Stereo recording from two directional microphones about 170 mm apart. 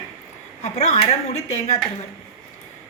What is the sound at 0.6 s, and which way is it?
A woman's voice, 40° left (ahead or behind).